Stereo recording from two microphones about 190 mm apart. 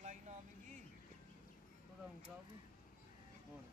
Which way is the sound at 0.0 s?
40° right (ahead or behind).